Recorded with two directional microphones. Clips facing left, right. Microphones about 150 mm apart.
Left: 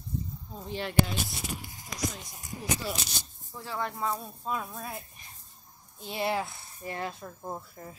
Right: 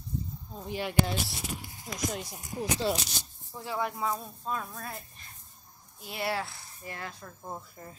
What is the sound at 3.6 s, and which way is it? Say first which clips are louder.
Speech: right 1 dB; 10° right (ahead or behind).